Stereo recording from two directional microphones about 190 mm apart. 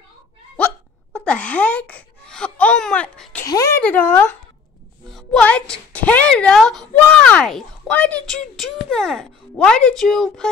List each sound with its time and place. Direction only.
1.1 s speech: 5° left (ahead or behind)
3.4 s a woman's voice: 15° left (ahead or behind)